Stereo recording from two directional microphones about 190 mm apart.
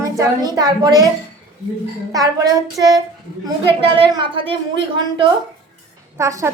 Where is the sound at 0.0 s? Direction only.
15° right (ahead or behind).